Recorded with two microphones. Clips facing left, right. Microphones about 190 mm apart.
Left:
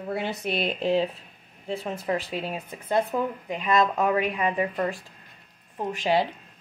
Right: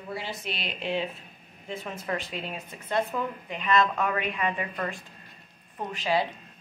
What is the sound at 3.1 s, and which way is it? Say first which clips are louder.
Speech: left 4 dB; 25° left (ahead or behind).